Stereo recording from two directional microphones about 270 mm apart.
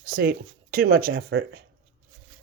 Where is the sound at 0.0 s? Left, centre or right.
Right.